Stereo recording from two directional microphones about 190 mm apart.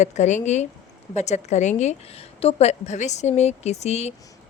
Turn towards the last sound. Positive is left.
turn(degrees=35)  # may be behind; listen again after turning